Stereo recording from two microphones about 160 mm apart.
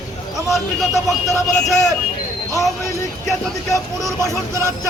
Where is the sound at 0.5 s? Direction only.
Centre (ahead or behind).